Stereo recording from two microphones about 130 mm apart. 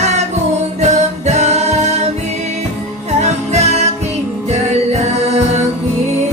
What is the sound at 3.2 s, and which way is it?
Music, 55° right (ahead or behind).